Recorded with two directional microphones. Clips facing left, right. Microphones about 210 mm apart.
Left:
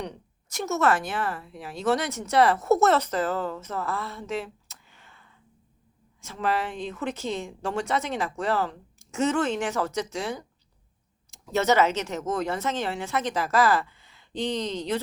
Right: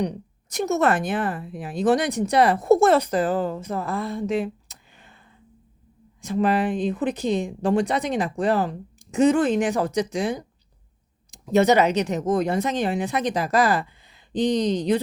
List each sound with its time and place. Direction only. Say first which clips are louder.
0.0 s a woman's voice: right 9 dB; 15° right (ahead or behind)
6.2 s speech: right 7 dB; 15° right (ahead or behind)